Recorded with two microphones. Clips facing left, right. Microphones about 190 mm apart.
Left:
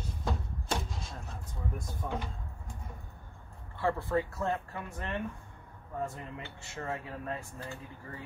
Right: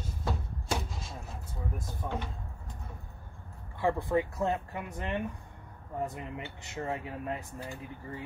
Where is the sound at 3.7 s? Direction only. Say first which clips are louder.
Right 2 dB; 15° right (ahead or behind).